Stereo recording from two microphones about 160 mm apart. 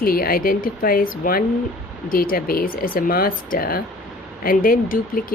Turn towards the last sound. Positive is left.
turn(degrees=60)  # may be behind; listen again after turning